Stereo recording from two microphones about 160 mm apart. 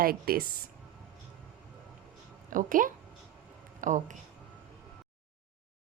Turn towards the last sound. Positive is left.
turn(degrees=-50)  # may be behind; listen again after turning